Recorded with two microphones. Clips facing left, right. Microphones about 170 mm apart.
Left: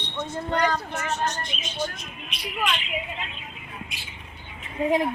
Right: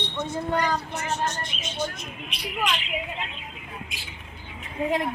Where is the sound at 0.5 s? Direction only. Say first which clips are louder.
Left 2 dB; 5° right (ahead or behind).